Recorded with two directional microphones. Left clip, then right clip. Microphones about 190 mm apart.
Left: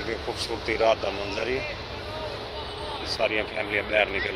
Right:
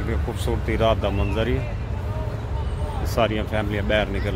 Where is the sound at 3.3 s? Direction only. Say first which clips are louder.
Right 1 dB; 15° right (ahead or behind).